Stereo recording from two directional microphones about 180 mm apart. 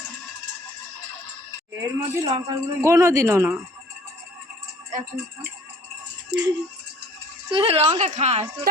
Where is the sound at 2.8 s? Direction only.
15° right (ahead or behind).